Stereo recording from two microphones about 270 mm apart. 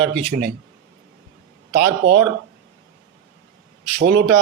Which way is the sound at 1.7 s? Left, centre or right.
Right.